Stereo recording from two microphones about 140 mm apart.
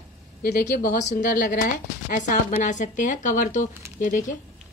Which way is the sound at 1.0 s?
75° left (ahead or behind).